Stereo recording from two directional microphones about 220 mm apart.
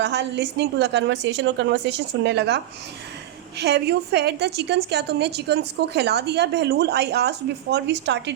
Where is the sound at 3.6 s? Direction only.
50° right (ahead or behind).